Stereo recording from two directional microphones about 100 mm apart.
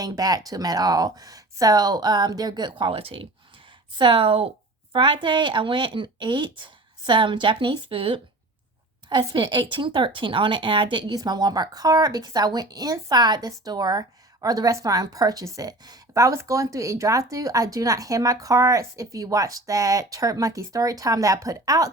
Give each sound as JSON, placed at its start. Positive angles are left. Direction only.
{"t": 0.0, "sound": "speech", "side_deg": -40}
{"t": 3.9, "sound": "a woman's voice", "side_deg": -55}
{"t": 9.0, "sound": "speech", "side_deg": -50}